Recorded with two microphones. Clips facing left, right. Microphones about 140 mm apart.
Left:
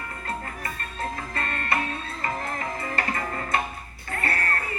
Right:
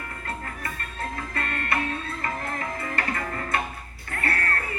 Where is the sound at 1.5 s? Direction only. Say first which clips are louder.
Left 1 dB; 50° right (ahead or behind).